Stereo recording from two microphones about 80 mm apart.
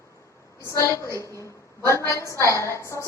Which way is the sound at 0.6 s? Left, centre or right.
Left.